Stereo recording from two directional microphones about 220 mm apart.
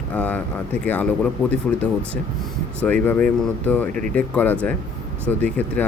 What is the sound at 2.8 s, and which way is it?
Speech, 5° left (ahead or behind).